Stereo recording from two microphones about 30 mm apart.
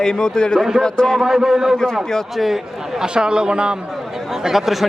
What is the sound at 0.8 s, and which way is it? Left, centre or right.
Speech, left.